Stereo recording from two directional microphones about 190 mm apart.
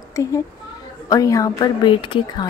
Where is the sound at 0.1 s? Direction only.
15° left (ahead or behind).